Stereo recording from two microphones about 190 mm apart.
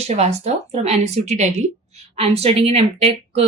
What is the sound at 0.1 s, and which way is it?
Speech, 35° right (ahead or behind).